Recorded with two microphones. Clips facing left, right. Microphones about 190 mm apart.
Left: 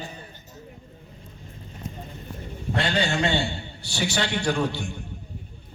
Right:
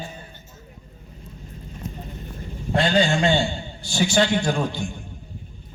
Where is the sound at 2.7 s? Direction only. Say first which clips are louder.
Right 5 dB; 65° left (ahead or behind).